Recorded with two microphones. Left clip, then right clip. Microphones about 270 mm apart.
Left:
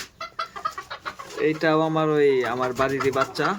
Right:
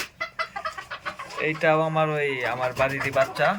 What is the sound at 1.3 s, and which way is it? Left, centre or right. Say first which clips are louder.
Speech: left 1 dB; centre.